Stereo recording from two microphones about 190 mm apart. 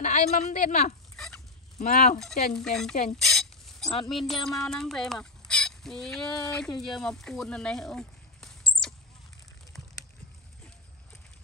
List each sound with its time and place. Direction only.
0.0 s a woman's voice: 40° left (ahead or behind)
1.1 s fowl: 5° left (ahead or behind)
1.8 s a woman's voice: 40° left (ahead or behind)
2.5 s speech: 5° left (ahead or behind)
3.2 s a sound: centre (ahead or behind)
4.1 s speech: centre (ahead or behind)